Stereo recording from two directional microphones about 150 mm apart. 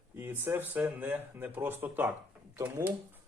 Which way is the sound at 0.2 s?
15° right (ahead or behind).